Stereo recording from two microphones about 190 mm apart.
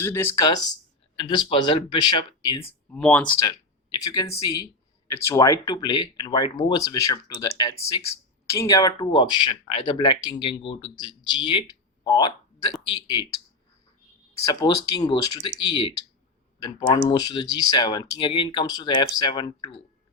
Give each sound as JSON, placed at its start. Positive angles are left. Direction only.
{"t": 0.0, "sound": "speech", "side_deg": 15}
{"t": 2.9, "sound": "speech", "side_deg": 5}
{"t": 3.4, "sound": "speech", "side_deg": 20}
{"t": 14.4, "sound": "speech", "side_deg": 20}
{"t": 17.0, "sound": "speech", "side_deg": 20}